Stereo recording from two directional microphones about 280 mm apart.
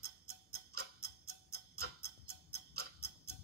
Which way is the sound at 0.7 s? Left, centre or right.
Right.